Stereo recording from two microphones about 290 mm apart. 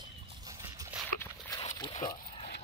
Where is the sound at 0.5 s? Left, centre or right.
Centre.